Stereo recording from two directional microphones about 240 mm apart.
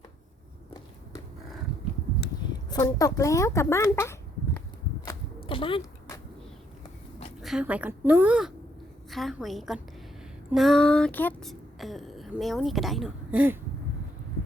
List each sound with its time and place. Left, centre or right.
2.5 s speech: centre
5.0 s a sound: left
7.4 s speech: centre